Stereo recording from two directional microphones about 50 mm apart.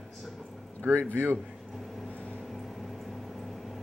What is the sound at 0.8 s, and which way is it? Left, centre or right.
Speech, right.